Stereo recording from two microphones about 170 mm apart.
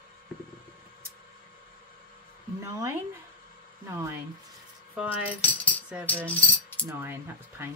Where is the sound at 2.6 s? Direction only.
15° right (ahead or behind).